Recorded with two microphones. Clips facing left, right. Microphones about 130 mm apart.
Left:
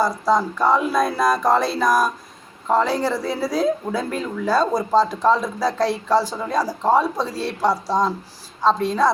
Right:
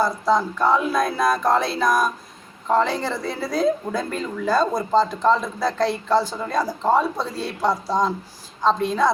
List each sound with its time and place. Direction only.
0.0 s a woman's voice: 10° left (ahead or behind)